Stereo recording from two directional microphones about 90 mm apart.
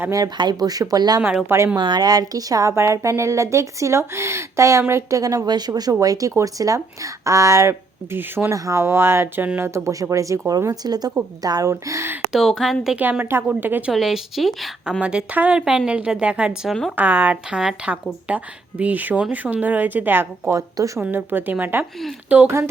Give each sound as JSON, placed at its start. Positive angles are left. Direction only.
{"t": 0.1, "sound": "speech", "side_deg": -50}
{"t": 1.5, "sound": "speech", "side_deg": -30}
{"t": 1.7, "sound": "speech", "side_deg": -50}
{"t": 11.7, "sound": "speech", "side_deg": -30}
{"t": 12.3, "sound": "speech", "side_deg": 0}
{"t": 13.0, "sound": "speech", "side_deg": -20}
{"t": 13.9, "sound": "speech", "side_deg": 0}
{"t": 15.0, "sound": "speech", "side_deg": -15}
{"t": 17.6, "sound": "speech", "side_deg": -5}
{"t": 20.5, "sound": "speech", "side_deg": -40}
{"t": 21.1, "sound": "speech", "side_deg": -20}